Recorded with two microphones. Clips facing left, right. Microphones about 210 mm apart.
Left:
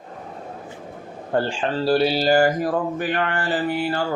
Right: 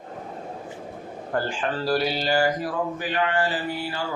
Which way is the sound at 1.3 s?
25° left (ahead or behind).